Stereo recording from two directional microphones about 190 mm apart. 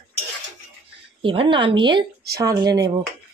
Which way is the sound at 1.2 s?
25° right (ahead or behind).